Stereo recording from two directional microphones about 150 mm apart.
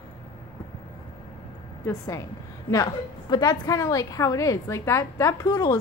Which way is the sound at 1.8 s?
20° left (ahead or behind).